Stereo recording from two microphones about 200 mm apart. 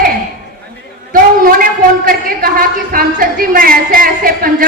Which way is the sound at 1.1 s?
45° right (ahead or behind).